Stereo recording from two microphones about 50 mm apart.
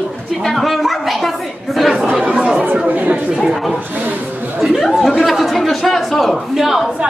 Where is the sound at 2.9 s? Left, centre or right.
Right.